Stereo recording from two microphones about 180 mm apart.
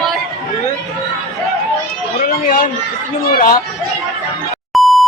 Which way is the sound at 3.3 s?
55° left (ahead or behind).